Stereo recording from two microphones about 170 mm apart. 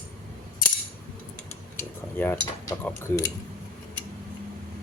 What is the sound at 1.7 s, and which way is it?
Speech, 10° left (ahead or behind).